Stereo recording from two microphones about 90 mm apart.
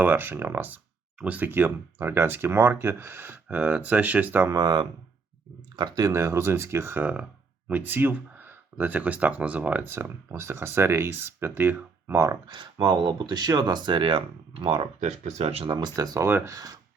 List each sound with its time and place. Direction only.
0.0 s speech: 20° right (ahead or behind)
4.4 s speech: 45° right (ahead or behind)
6.1 s speech: 30° right (ahead or behind)
12.1 s speech: 40° right (ahead or behind)
12.7 s speech: 50° right (ahead or behind); by 15.8 s 90° right
16.0 s speech: 40° right (ahead or behind)
16.2 s speech: 25° right (ahead or behind)